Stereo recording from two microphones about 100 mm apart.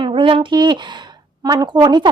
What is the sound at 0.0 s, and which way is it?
A woman's voice, 60° right (ahead or behind).